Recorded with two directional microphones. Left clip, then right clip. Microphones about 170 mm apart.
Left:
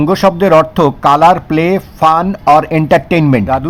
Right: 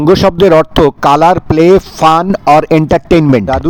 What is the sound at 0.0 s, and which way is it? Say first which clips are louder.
A man's voice: right 3 dB; 40° right (ahead or behind).